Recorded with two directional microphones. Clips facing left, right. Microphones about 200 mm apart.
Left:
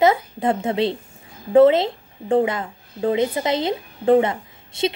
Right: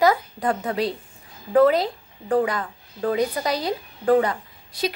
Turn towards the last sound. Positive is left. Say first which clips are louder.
# left 4 dB
turn(degrees=25)  # may be behind; listen again after turning